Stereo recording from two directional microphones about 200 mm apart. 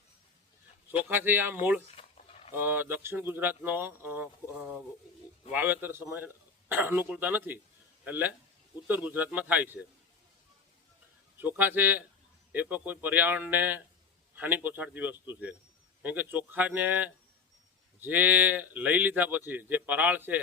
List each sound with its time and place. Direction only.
1.0 s speech: 10° right (ahead or behind)
2.0 s a sound: 30° left (ahead or behind)
2.5 s speech: 10° right (ahead or behind)
11.3 s speech: 10° right (ahead or behind)